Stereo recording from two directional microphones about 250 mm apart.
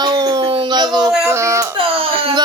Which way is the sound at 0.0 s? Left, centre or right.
Centre.